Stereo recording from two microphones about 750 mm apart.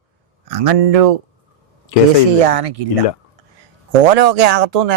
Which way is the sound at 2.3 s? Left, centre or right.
Right.